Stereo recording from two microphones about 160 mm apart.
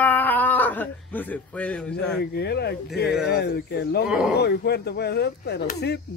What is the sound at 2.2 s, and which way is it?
Speech, 90° left.